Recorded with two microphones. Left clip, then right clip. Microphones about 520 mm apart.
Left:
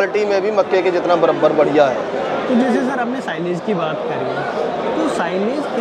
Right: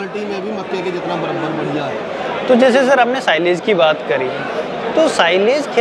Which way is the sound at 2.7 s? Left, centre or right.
Right.